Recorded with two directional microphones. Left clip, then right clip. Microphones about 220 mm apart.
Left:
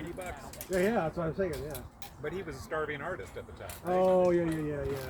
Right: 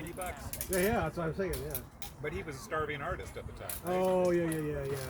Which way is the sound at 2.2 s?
15° left (ahead or behind).